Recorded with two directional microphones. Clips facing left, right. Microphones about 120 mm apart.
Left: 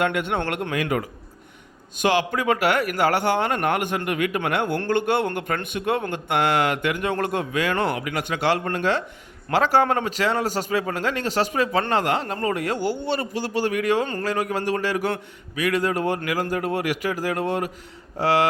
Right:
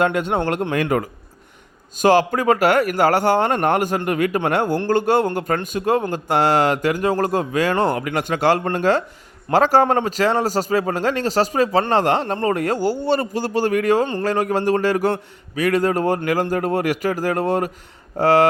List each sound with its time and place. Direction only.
0.0 s speech: 30° right (ahead or behind)
0.7 s speech: 45° right (ahead or behind)